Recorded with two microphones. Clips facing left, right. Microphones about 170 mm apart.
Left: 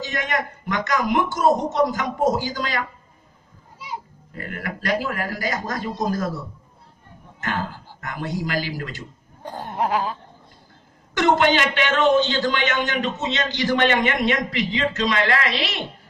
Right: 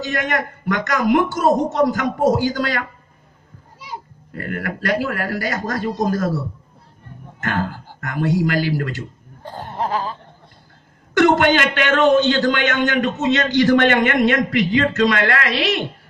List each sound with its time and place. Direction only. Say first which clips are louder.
0.0 s a man's voice: right 4 dB; 50° right (ahead or behind)
4.3 s a man's voice: right 5 dB; 50° right (ahead or behind)
7.4 s a man's voice: right 4 dB; 50° right (ahead or behind)
9.4 s chuckle: even; 15° left (ahead or behind)
11.1 s a man's voice: right 4 dB; 50° right (ahead or behind)